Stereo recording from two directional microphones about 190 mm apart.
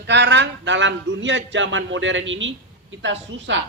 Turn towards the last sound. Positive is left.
turn(degrees=-70)  # may be behind; listen again after turning